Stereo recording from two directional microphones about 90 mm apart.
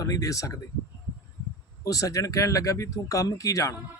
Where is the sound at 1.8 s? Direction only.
40° left (ahead or behind).